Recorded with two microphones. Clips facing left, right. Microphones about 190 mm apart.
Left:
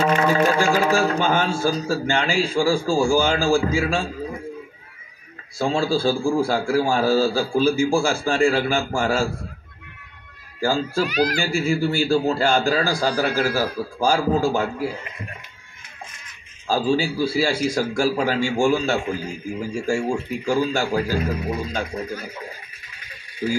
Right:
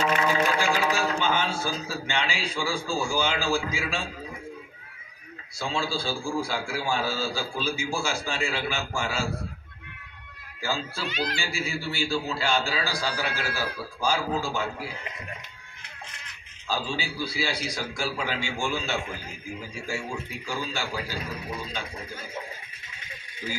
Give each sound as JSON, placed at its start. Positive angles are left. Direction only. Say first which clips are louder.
{"t": 0.0, "sound": "speech", "louder": "left 6 dB", "side_deg": 45}
{"t": 5.6, "sound": "a man's voice", "louder": "left 9 dB", "side_deg": 45}
{"t": 10.6, "sound": "a man's voice", "louder": "left 10 dB", "side_deg": 50}
{"t": 11.1, "sound": "speech", "louder": "left 5 dB", "side_deg": -25}
{"t": 11.3, "sound": "a man's voice", "louder": "left 10 dB", "side_deg": 45}
{"t": 16.6, "sound": "a man's voice", "louder": "left 10 dB", "side_deg": 45}
{"t": 23.4, "sound": "a man's voice", "louder": "left 11 dB", "side_deg": 45}